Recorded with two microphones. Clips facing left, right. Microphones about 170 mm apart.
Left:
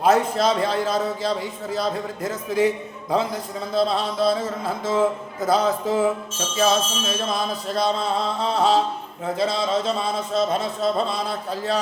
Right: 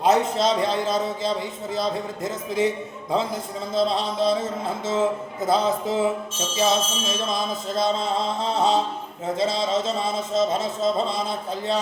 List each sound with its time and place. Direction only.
0.0 s speech: 20° right (ahead or behind)
3.8 s speech: 20° right (ahead or behind)